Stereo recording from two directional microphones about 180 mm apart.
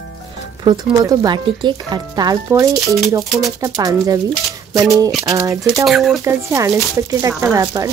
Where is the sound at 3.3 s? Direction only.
Centre (ahead or behind).